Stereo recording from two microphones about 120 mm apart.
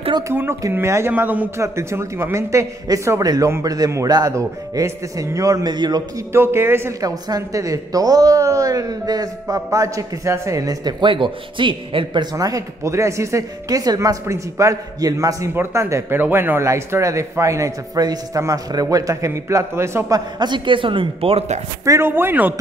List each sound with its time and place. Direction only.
0.3 s a woman's voice: 20° right (ahead or behind)
1.6 s a woman's voice: 25° right (ahead or behind)
6.3 s a woman's voice: 20° right (ahead or behind)
20.3 s a woman's voice: 40° right (ahead or behind); by 21.5 s 55° right (ahead or behind)
21.8 s a woman's voice: 20° right (ahead or behind)